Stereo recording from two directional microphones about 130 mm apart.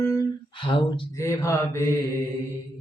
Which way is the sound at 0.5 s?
40° left (ahead or behind).